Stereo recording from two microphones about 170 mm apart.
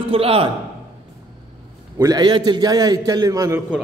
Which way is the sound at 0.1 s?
35° right (ahead or behind).